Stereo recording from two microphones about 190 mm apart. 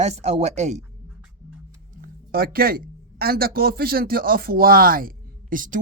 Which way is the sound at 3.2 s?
55° right (ahead or behind).